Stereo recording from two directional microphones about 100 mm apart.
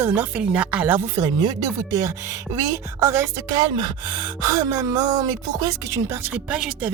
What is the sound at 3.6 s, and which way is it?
Speech, 50° right (ahead or behind).